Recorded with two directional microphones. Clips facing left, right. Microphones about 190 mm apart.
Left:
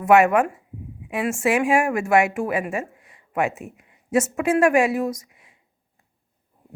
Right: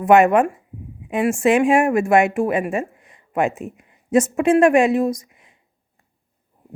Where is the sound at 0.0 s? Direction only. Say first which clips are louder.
Right 3 dB; 35° right (ahead or behind).